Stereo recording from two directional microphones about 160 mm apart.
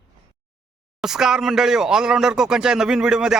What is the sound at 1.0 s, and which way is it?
Speech, 5° right (ahead or behind).